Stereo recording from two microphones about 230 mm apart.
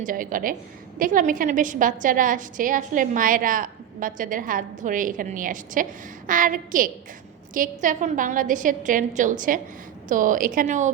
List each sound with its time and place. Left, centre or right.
0.0 s a woman's voice: right